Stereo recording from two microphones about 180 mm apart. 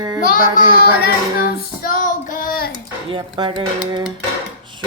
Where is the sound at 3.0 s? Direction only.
25° right (ahead or behind).